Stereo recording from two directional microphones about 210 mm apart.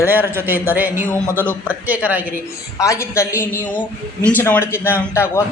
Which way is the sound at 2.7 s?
15° left (ahead or behind).